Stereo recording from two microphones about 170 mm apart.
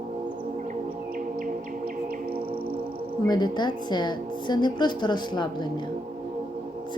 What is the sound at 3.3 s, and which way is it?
A woman's voice, 25° left (ahead or behind).